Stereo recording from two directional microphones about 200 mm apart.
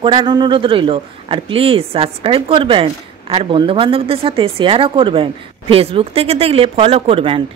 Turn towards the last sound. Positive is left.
turn(degrees=-25)  # may be behind; listen again after turning